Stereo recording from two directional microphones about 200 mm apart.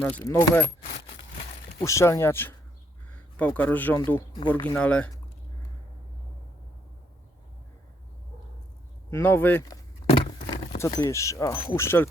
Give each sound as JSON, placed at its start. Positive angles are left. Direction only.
{"t": 0.0, "sound": "speech", "side_deg": 10}
{"t": 0.9, "sound": "a sound", "side_deg": 35}
{"t": 1.8, "sound": "speech", "side_deg": 15}
{"t": 9.0, "sound": "speech", "side_deg": 10}
{"t": 10.1, "sound": "a sound", "side_deg": 30}
{"t": 10.8, "sound": "speech", "side_deg": 15}